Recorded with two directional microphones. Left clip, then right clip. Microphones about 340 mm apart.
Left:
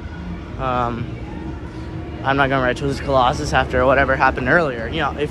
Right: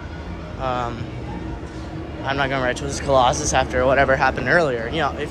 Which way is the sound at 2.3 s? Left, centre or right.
Centre.